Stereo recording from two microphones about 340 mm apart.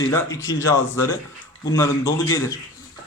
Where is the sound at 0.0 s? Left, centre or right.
Centre.